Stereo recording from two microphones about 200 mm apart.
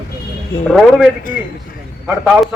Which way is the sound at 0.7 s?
Centre (ahead or behind).